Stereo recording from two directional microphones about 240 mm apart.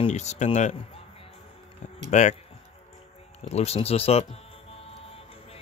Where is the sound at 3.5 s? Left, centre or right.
Left.